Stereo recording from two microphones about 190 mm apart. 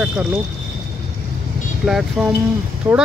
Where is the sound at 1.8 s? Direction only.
Centre (ahead or behind).